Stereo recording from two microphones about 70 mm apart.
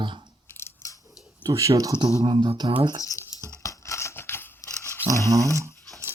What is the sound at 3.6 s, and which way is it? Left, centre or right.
Scissors, left.